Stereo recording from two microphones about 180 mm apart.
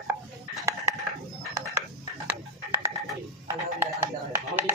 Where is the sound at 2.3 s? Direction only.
10° right (ahead or behind).